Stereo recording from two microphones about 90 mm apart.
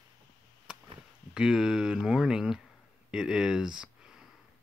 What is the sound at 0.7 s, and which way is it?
Chop, 10° right (ahead or behind).